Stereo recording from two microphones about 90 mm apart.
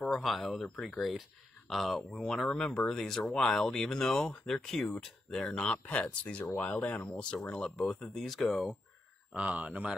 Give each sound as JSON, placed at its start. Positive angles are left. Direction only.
{"t": 0.0, "sound": "speech", "side_deg": 0}
{"t": 9.3, "sound": "speech", "side_deg": -15}